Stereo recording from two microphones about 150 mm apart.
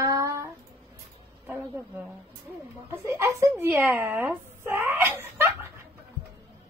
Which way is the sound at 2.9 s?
20° right (ahead or behind).